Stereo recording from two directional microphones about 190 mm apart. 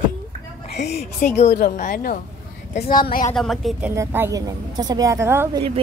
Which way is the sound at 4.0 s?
15° right (ahead or behind).